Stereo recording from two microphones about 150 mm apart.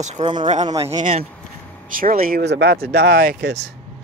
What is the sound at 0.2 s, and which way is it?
Speech, 30° right (ahead or behind).